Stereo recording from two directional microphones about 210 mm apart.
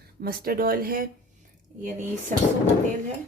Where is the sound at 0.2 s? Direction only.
45° right (ahead or behind).